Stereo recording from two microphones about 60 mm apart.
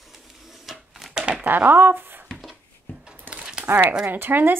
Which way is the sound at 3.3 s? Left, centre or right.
Centre.